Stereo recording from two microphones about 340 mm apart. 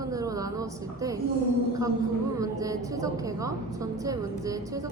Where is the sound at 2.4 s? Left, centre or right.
Centre.